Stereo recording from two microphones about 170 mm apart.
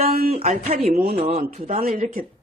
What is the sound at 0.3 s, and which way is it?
Speech, 40° right (ahead or behind).